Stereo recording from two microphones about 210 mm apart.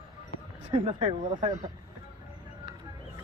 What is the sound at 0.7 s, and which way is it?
Speech, 25° right (ahead or behind).